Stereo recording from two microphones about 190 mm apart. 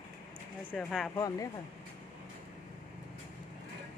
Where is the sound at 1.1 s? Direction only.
15° left (ahead or behind).